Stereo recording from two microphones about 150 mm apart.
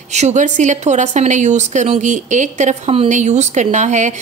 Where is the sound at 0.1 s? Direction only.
50° right (ahead or behind).